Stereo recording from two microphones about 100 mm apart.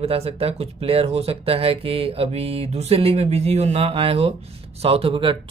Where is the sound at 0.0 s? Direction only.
75° right (ahead or behind).